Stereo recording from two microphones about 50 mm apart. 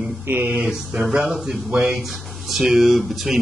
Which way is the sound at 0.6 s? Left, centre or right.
Centre.